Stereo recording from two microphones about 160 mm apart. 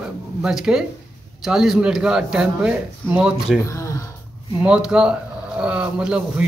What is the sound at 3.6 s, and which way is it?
Speech, 20° left (ahead or behind).